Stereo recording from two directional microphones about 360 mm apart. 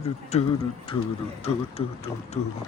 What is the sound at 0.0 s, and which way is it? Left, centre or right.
Speech, centre.